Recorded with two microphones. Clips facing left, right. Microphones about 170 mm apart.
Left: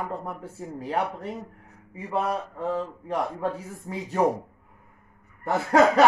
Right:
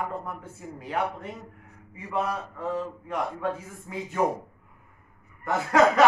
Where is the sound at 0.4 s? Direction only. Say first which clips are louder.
Left 5 dB; 35° left (ahead or behind).